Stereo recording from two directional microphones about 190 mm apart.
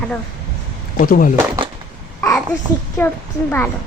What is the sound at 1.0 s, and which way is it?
Speech, 45° left (ahead or behind).